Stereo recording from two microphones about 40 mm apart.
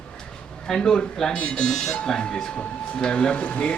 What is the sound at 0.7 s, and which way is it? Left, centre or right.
A man's voice, centre.